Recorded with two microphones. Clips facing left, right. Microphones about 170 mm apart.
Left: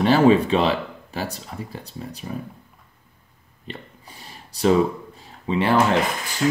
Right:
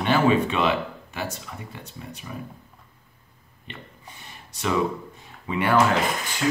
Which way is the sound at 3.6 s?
35° left (ahead or behind).